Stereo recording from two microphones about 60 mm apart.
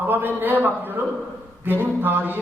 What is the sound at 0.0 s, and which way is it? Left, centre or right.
A man's voice, right.